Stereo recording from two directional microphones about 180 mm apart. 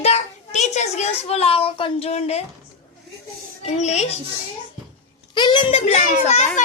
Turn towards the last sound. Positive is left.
turn(degrees=35)  # may be behind; listen again after turning